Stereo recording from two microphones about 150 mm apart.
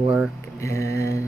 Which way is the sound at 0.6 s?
20° left (ahead or behind).